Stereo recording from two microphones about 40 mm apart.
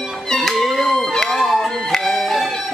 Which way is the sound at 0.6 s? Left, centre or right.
Centre.